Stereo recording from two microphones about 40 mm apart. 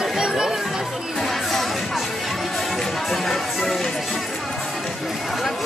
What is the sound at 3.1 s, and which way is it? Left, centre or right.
Music, centre.